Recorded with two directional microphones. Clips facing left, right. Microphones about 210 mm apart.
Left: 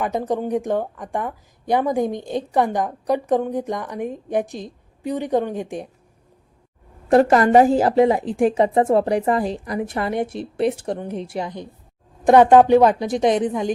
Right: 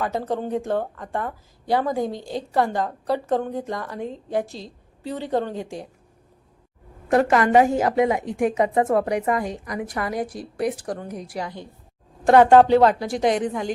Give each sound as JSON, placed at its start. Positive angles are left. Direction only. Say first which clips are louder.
{"t": 0.0, "sound": "a woman's voice", "louder": "left 3 dB", "side_deg": 15}
{"t": 7.1, "sound": "a woman's voice", "louder": "left 4 dB", "side_deg": 35}